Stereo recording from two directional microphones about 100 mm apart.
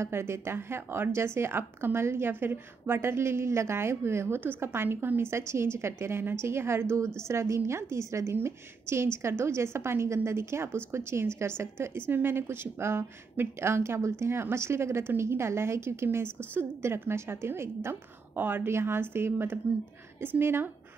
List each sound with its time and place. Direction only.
0.0 s a woman's voice: 25° right (ahead or behind)